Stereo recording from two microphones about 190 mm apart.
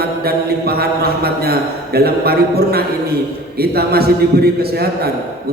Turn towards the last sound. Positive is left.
turn(degrees=-55)  # may be behind; listen again after turning